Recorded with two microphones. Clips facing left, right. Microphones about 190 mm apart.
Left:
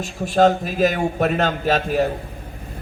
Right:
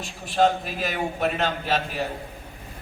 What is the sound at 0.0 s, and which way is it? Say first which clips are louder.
A man's voice: left 5 dB; 45° left (ahead or behind).